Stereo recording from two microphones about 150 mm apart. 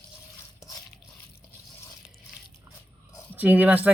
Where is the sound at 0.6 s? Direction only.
25° left (ahead or behind).